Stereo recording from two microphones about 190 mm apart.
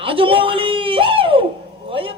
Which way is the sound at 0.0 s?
30° right (ahead or behind).